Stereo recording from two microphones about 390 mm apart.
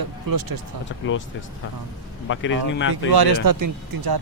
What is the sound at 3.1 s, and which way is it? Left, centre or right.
Speech, right.